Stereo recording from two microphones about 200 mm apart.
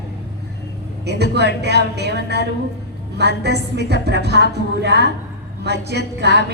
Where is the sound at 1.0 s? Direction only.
55° right (ahead or behind).